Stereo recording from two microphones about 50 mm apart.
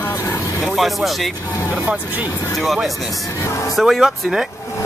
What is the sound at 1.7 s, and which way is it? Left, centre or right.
Speech, right.